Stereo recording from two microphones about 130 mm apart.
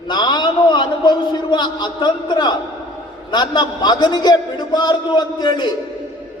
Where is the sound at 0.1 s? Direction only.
35° left (ahead or behind).